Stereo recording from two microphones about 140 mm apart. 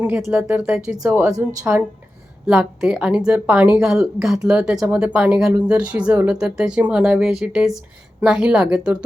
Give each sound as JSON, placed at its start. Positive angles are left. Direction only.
{"t": 0.0, "sound": "a woman's voice", "side_deg": -10}